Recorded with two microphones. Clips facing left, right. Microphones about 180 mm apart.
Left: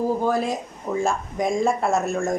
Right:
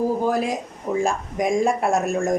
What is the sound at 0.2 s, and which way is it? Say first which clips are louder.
Speech: right 1 dB; 15° right (ahead or behind).